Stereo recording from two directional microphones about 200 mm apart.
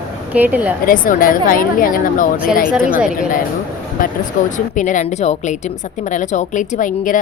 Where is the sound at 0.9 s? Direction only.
45° left (ahead or behind).